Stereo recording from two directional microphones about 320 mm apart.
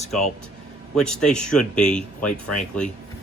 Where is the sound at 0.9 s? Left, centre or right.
Centre.